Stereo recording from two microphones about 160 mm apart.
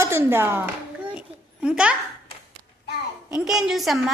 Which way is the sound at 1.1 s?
5° right (ahead or behind).